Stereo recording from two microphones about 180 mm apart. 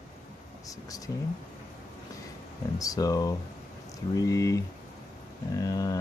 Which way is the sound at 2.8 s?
20° left (ahead or behind).